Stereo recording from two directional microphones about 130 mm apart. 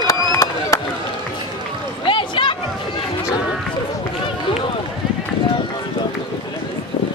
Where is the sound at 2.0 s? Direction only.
40° left (ahead or behind).